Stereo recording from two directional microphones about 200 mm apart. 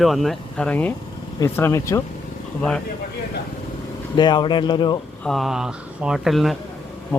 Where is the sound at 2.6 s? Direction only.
5° left (ahead or behind).